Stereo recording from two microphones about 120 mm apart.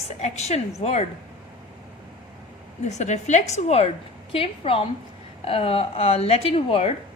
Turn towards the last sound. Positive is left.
turn(degrees=55)  # may be behind; listen again after turning